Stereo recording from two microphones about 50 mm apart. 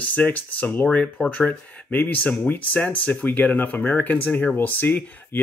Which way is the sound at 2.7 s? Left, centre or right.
Left.